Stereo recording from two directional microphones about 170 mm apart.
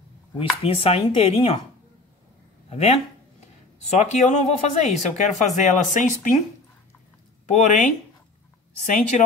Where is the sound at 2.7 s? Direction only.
40° left (ahead or behind).